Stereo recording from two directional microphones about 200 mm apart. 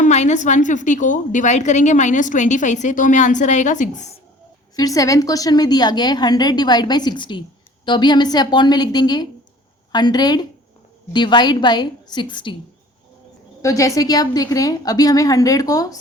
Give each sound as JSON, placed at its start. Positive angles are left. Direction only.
{"t": 0.0, "sound": "a woman's voice", "side_deg": 35}
{"t": 4.8, "sound": "a woman's voice", "side_deg": 15}
{"t": 13.6, "sound": "a woman's voice", "side_deg": 15}